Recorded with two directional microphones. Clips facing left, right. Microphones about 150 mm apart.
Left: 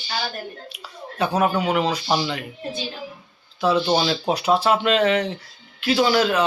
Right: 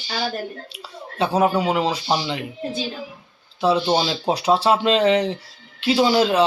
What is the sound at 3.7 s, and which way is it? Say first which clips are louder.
Speech: left 2 dB; 15° right (ahead or behind).